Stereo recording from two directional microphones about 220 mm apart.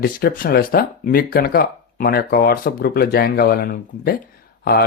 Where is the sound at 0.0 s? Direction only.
45° left (ahead or behind).